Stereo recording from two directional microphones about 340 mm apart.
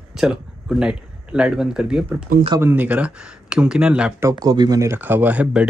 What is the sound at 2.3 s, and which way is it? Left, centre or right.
Speech, centre.